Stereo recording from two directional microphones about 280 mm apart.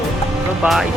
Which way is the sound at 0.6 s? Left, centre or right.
Centre.